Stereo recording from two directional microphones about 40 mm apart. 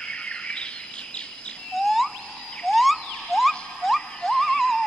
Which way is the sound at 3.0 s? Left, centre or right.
Centre.